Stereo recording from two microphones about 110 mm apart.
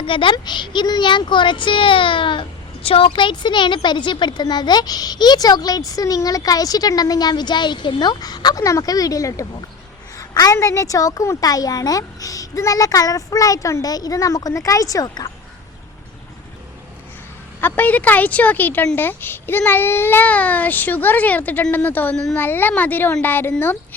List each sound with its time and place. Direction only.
0.0 s speech: 50° left (ahead or behind)
17.6 s a child's voice: 15° left (ahead or behind)